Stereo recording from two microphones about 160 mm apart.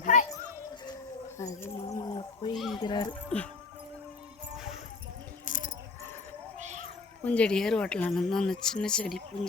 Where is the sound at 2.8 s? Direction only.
25° left (ahead or behind).